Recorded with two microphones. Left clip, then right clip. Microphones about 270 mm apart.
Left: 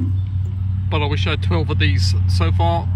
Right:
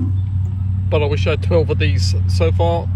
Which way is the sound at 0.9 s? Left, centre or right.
Centre.